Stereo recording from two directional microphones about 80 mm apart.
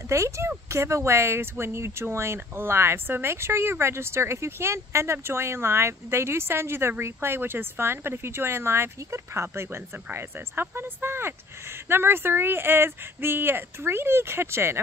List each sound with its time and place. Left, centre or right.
0.1 s speech: right